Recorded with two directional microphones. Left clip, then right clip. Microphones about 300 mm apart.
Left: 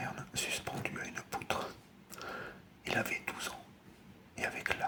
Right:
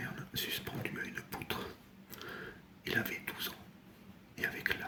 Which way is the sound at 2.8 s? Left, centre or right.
Centre.